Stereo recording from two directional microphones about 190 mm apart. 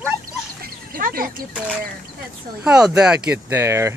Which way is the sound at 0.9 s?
50° right (ahead or behind).